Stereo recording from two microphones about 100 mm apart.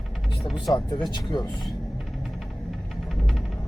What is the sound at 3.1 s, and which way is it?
Music, centre (ahead or behind).